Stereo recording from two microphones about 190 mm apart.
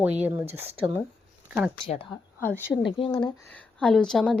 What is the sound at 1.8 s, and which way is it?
Speech, 30° left (ahead or behind).